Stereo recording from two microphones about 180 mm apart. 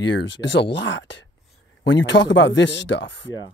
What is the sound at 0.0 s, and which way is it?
Speech, 80° left.